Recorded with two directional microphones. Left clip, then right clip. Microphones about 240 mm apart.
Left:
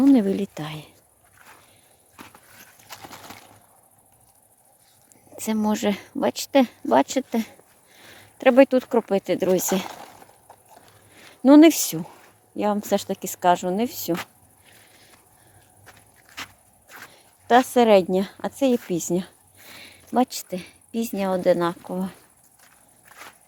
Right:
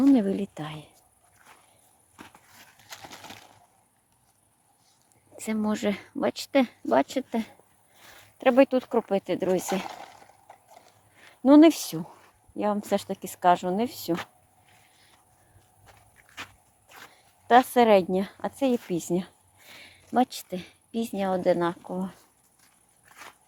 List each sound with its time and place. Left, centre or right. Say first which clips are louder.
0.0 s speech: left 4 dB; centre
2.2 s horse: left 4 dB; centre
5.4 s speech: left 5 dB; centre
11.4 s speech: left 4 dB; centre
15.9 s walk: left 5 dB; centre
17.1 s speech: left 2 dB; centre